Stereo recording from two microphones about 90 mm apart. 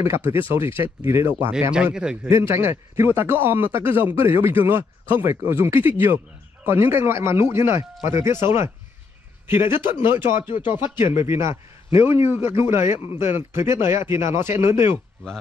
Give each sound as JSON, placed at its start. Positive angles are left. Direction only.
{"t": 0.0, "sound": "speech", "side_deg": -25}
{"t": 1.7, "sound": "speech", "side_deg": -10}
{"t": 2.2, "sound": "speech", "side_deg": -30}
{"t": 10.5, "sound": "speech", "side_deg": 65}
{"t": 11.1, "sound": "speech", "side_deg": -30}